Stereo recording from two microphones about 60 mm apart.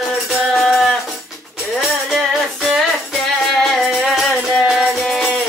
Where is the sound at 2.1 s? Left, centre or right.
Centre.